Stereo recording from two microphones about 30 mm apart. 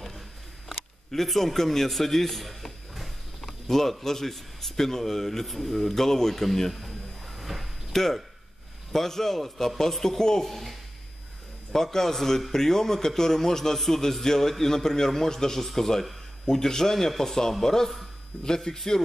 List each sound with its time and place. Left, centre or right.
1.1 s a man's voice: centre
3.6 s speech: centre
7.3 s a sound: centre
7.9 s speech: centre
10.5 s speech: centre
11.7 s speech: centre
16.4 s speech: centre